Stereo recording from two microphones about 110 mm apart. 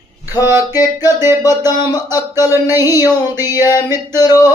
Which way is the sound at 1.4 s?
35° left (ahead or behind).